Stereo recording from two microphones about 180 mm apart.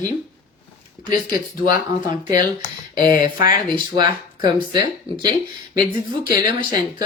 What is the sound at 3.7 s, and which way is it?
Speech, 25° right (ahead or behind).